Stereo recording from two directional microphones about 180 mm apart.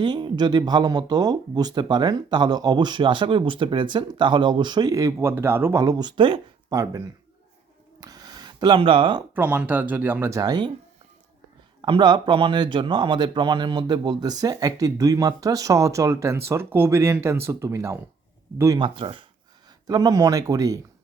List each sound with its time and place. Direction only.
0.0 s speech: 25° right (ahead or behind)
8.0 s a sound: 20° right (ahead or behind)
9.3 s speech: 10° right (ahead or behind)
11.8 s speech: 25° right (ahead or behind)
18.9 s speech: 30° right (ahead or behind)